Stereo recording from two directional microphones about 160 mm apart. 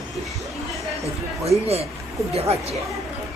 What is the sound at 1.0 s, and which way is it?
Speech, 40° right (ahead or behind).